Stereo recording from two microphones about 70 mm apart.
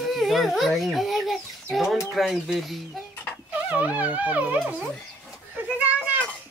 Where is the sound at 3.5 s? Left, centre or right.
Centre.